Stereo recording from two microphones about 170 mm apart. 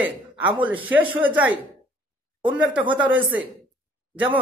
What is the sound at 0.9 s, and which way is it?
Speech, 10° right (ahead or behind).